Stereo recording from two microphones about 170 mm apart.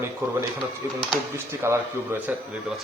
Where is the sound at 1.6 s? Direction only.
15° right (ahead or behind).